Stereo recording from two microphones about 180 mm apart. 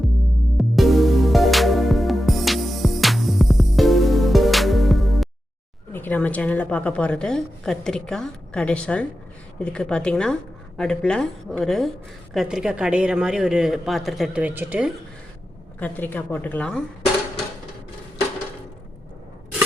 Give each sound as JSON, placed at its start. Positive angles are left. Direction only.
{"t": 0.5, "sound": "music", "side_deg": 0}
{"t": 5.9, "sound": "a woman's voice", "side_deg": 10}
{"t": 15.8, "sound": "a woman's voice", "side_deg": 10}